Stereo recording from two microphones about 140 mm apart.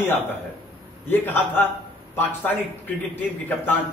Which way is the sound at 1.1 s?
15° left (ahead or behind).